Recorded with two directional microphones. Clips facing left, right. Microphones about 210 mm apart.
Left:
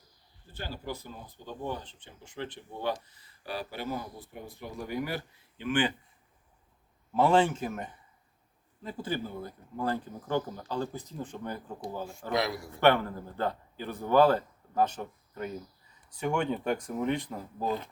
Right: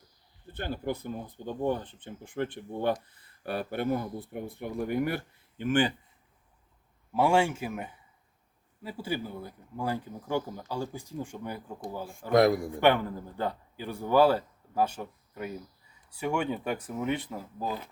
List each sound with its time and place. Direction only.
0.5 s speech: 55° right (ahead or behind)
7.1 s a man's voice: 10° right (ahead or behind)
12.3 s a man's voice: 50° right (ahead or behind)
12.8 s a man's voice: 15° right (ahead or behind)